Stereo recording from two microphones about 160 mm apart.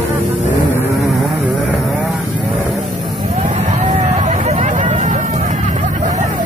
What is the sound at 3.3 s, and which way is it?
Vehicle, 45° right (ahead or behind).